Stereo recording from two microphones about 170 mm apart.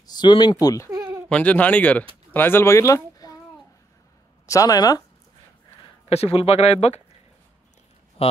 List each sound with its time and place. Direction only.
0.0 s speech: 25° left (ahead or behind)
0.8 s a sound: 20° right (ahead or behind)
1.3 s speech: 10° left (ahead or behind)
4.5 s speech: 20° left (ahead or behind)
6.0 s speech: 35° left (ahead or behind)
8.2 s speech: 35° left (ahead or behind)